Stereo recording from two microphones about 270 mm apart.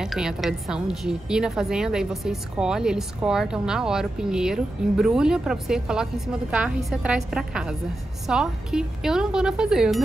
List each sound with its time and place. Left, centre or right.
0.0 s a woman's voice: centre